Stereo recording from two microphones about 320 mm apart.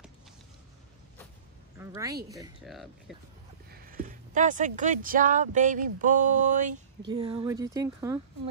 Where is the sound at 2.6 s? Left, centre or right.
Centre.